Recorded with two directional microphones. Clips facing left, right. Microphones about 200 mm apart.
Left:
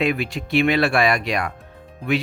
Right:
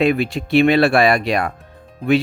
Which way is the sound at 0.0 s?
30° right (ahead or behind).